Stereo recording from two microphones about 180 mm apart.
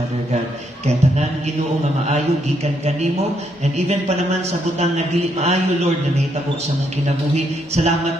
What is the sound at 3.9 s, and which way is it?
A man's voice, 35° right (ahead or behind).